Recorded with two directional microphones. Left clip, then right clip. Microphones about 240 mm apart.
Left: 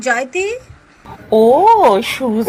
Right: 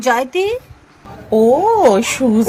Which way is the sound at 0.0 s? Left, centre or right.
Centre.